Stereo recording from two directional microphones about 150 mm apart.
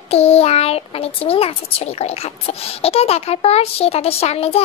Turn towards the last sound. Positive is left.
turn(degrees=45)  # may be behind; listen again after turning